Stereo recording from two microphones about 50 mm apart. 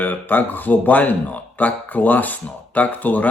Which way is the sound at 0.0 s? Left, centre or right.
Left.